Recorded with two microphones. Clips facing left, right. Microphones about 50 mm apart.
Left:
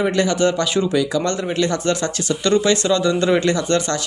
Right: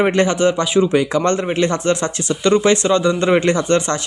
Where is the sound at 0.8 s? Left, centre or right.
Right.